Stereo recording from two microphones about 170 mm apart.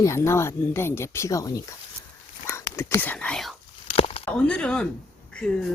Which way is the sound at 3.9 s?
35° left (ahead or behind).